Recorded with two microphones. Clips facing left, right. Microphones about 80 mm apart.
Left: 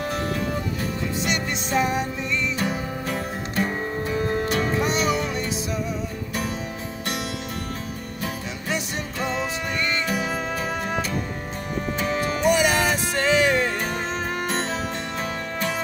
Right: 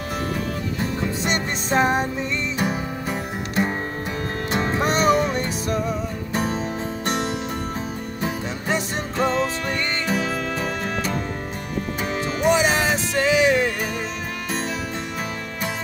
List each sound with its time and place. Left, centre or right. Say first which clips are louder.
1.2 s music: right 2 dB; right
2.6 s music: right 2 dB; centre
4.8 s music: right 5 dB; right
8.6 s music: right 3 dB; right
12.1 s music: right 1 dB; right